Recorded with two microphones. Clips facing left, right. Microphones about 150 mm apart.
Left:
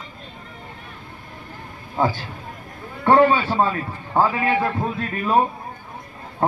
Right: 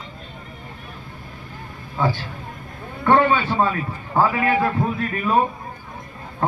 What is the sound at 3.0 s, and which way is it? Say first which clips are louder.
A man's voice: left 2 dB; 30° left (ahead or behind).